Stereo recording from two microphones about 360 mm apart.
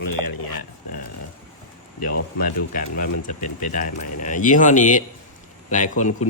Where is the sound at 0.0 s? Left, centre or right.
Left.